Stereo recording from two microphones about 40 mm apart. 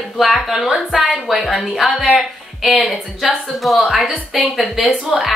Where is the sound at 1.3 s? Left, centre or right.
Centre.